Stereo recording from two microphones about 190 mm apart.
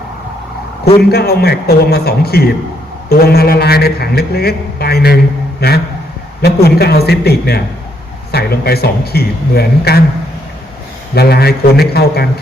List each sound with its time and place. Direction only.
1.1 s a man's voice: 55° left (ahead or behind)
11.1 s a man's voice: 55° left (ahead or behind)